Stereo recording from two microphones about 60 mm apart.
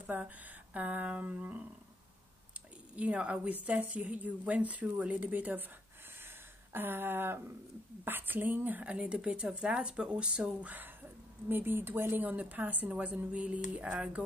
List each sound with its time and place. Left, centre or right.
0.1 s a woman's voice: right
3.0 s a woman's voice: right
6.7 s a woman's voice: right
8.8 s speech: centre
11.4 s a woman's voice: right; by 14.2 s centre